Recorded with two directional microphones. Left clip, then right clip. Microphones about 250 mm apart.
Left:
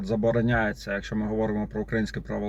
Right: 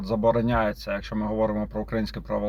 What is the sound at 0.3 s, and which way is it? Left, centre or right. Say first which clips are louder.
Speech: right 1 dB; right.